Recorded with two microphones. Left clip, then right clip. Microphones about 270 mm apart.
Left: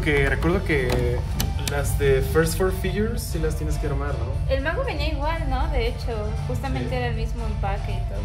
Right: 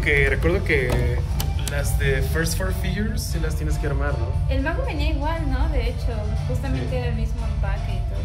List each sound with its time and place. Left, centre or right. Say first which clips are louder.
0.0 s speech: right 2 dB; centre
4.5 s a woman's voice: left 3 dB; left